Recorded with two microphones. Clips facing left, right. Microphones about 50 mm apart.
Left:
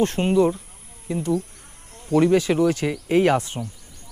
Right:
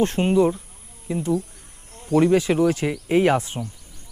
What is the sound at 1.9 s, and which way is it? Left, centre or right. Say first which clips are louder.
Insect: even; centre.